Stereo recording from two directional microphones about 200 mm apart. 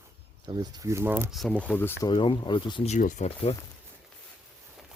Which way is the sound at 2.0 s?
25° left (ahead or behind).